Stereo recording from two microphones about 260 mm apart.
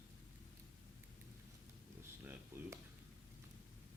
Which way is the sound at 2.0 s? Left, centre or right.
Centre.